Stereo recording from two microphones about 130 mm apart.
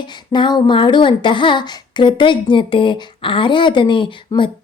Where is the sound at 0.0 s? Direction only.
35° left (ahead or behind).